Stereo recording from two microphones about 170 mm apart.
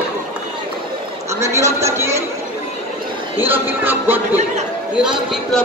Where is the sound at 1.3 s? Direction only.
15° right (ahead or behind).